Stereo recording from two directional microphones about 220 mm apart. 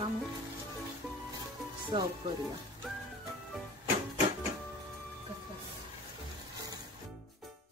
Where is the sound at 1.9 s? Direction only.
30° right (ahead or behind).